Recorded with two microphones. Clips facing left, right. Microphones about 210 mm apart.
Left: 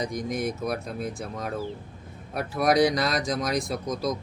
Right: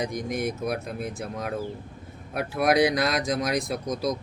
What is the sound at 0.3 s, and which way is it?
Speech, 55° right (ahead or behind).